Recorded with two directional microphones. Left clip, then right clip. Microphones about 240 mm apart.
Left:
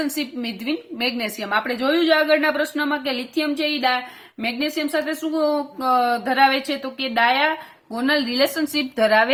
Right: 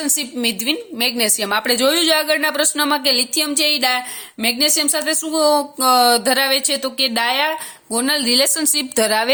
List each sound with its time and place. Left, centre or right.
0.0 s a woman's voice: right